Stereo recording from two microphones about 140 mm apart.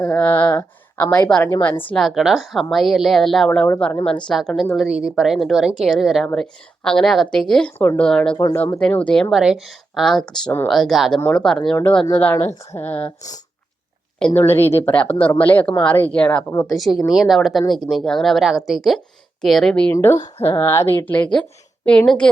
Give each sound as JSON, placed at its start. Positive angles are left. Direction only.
{"t": 0.0, "sound": "a woman's voice", "side_deg": 10}
{"t": 7.8, "sound": "speech", "side_deg": 15}
{"t": 8.0, "sound": "a woman's voice", "side_deg": 5}
{"t": 14.3, "sound": "a woman's voice", "side_deg": 15}
{"t": 19.9, "sound": "speech", "side_deg": 15}